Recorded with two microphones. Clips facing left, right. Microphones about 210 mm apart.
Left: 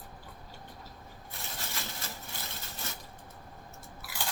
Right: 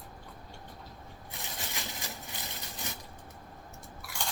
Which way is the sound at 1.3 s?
15° right (ahead or behind).